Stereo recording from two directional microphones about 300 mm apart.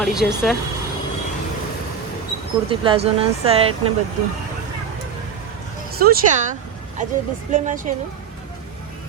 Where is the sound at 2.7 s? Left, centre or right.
Centre.